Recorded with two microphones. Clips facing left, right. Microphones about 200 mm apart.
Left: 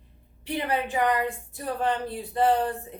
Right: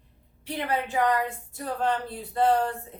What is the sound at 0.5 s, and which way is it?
A woman's voice, 15° left (ahead or behind).